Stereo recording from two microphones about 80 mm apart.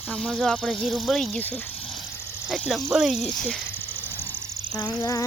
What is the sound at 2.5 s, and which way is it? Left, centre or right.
Speech, centre.